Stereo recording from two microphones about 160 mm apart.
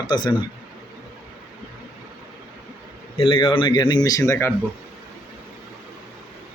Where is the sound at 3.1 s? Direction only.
30° left (ahead or behind).